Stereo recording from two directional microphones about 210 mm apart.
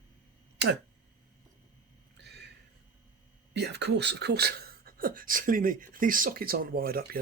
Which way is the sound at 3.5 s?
50° right (ahead or behind).